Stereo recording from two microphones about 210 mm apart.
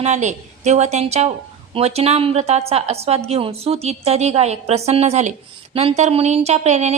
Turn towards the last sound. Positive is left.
turn(degrees=-30)  # may be behind; listen again after turning